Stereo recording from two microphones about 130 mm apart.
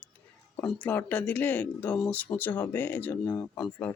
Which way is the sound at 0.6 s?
10° left (ahead or behind).